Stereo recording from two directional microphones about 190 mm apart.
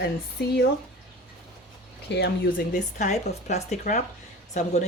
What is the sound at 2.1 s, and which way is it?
Speech, 60° left (ahead or behind).